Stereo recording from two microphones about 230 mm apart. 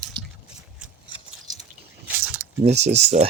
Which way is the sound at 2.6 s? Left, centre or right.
Right.